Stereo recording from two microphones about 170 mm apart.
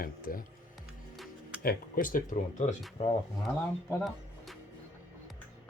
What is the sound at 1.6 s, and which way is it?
Speech, 55° left (ahead or behind).